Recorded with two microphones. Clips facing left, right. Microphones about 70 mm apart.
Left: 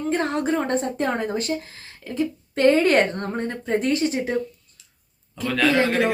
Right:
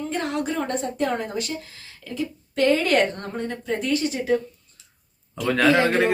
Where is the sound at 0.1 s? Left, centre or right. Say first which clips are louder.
Left 5 dB; left.